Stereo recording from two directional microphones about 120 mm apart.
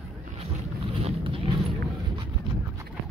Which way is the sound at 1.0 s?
50° right (ahead or behind).